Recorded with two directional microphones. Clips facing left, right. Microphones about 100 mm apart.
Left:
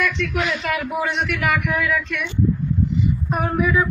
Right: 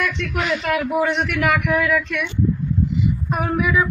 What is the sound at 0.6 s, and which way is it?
Speech, 40° right (ahead or behind).